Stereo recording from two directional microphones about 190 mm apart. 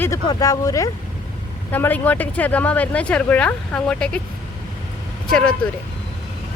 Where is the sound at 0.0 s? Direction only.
20° left (ahead or behind).